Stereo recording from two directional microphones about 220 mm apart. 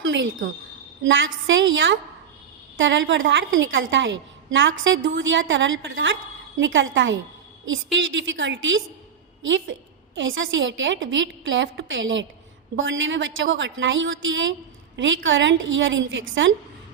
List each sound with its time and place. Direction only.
0.0 s a woman's voice: 60° right (ahead or behind)